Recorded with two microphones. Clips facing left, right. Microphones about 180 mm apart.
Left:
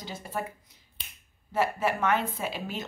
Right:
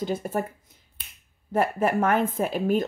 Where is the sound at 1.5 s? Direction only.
50° right (ahead or behind).